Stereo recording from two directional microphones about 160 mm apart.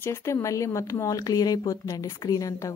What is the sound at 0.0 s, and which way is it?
A woman's voice, 15° left (ahead or behind).